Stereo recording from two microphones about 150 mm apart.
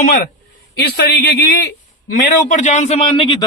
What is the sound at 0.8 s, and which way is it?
Speech, 90° left.